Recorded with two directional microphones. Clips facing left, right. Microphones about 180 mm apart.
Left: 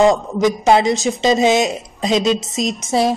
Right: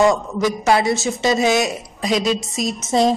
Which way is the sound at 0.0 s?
20° left (ahead or behind).